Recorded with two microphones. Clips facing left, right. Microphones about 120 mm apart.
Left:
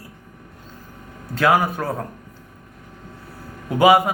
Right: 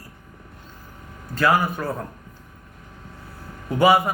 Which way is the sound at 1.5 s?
70° left (ahead or behind).